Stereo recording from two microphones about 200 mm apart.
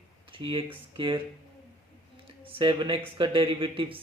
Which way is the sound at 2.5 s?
25° right (ahead or behind).